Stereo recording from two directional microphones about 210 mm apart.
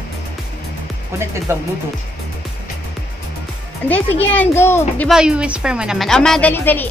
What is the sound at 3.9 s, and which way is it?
Speech, 10° left (ahead or behind).